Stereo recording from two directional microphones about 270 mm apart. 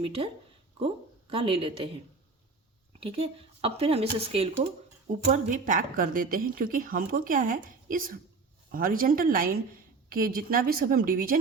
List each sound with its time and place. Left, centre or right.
0.0 s speech: right
1.3 s speech: right
3.0 s a woman's voice: right